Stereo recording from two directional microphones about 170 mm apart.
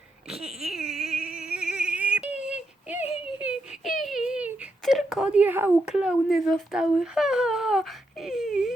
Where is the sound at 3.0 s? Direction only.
35° left (ahead or behind).